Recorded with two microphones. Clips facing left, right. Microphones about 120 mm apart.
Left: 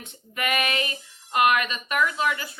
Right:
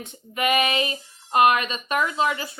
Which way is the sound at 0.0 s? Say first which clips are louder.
Right 5 dB; 20° right (ahead or behind).